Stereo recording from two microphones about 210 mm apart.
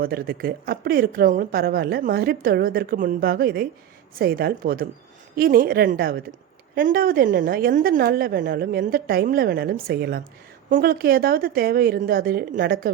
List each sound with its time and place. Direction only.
0.0 s a woman's voice: 45° right (ahead or behind)